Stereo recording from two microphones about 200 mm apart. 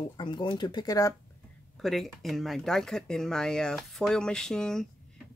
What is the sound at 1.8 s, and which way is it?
Speech, centre (ahead or behind).